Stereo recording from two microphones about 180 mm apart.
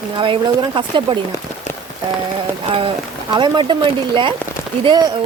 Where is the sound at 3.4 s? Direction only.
25° right (ahead or behind).